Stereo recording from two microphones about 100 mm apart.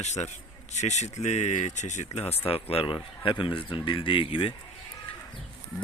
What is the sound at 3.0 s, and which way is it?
Speech, 55° left (ahead or behind).